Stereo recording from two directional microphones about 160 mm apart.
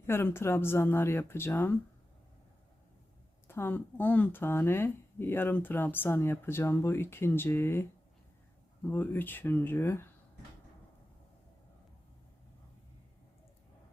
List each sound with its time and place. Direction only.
0.1 s speech: 15° left (ahead or behind)
3.4 s speech: 15° left (ahead or behind)